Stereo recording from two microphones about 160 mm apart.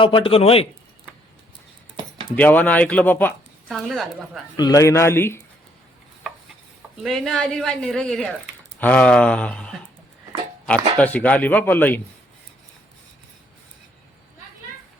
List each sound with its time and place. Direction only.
0.0 s a man's voice: 30° left (ahead or behind)
2.3 s speech: 10° left (ahead or behind)
3.7 s a woman's voice: centre (ahead or behind)
4.5 s speech: 25° left (ahead or behind)
7.0 s a woman's voice: centre (ahead or behind)